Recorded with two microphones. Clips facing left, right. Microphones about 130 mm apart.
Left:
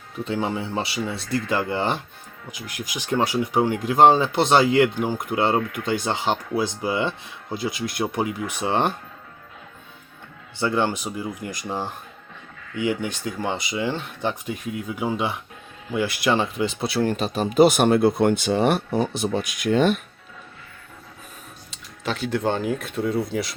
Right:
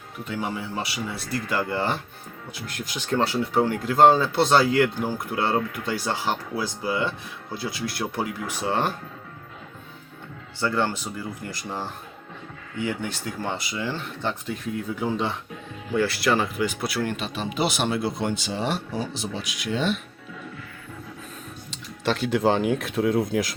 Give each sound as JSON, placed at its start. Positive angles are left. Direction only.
{"t": 0.3, "sound": "speech", "side_deg": 25}
{"t": 10.6, "sound": "speech", "side_deg": 15}
{"t": 21.7, "sound": "speech", "side_deg": 0}